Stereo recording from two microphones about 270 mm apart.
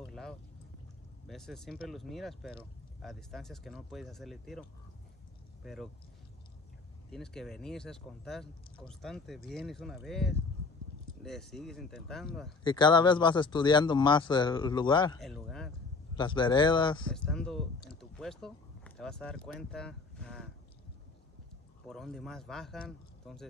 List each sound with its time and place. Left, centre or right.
0.0 s a sound: centre
1.2 s speech: centre
7.1 s speech: centre
12.6 s speech: centre
15.1 s speech: centre
16.2 s speech: centre
17.1 s speech: centre
21.8 s speech: centre